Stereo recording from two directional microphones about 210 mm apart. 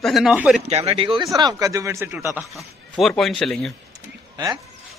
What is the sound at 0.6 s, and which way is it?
Speech, 30° right (ahead or behind).